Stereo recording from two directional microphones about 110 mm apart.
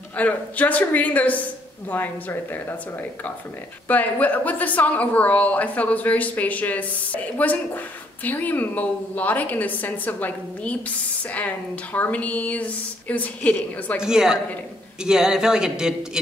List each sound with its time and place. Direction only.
0.1 s a woman's voice: 15° left (ahead or behind)
3.8 s a woman's voice: 15° left (ahead or behind)
14.0 s speech: 5° right (ahead or behind)